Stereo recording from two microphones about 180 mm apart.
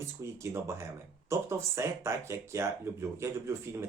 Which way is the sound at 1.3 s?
15° right (ahead or behind).